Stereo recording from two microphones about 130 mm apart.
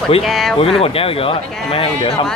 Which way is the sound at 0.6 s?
50° left (ahead or behind).